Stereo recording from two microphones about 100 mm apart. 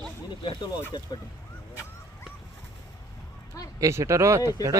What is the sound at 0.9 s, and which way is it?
Speech, 45° left (ahead or behind).